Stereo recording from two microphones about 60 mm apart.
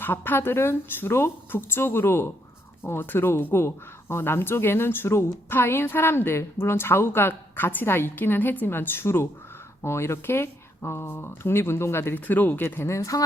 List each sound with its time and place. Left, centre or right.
0.0 s a woman's voice: left
12.1 s a woman's voice: left
12.9 s speech: left